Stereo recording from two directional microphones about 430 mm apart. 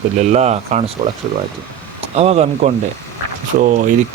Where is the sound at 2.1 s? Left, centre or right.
Centre.